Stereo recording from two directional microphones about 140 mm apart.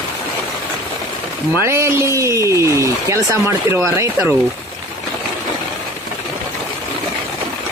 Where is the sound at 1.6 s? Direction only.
20° right (ahead or behind).